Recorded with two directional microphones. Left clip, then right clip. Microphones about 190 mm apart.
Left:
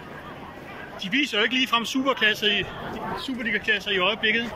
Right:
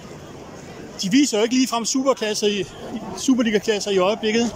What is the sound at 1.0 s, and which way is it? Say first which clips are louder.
Speech: right 4 dB; 30° right (ahead or behind).